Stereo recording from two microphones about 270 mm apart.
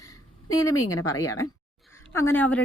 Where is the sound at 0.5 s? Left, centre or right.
Centre.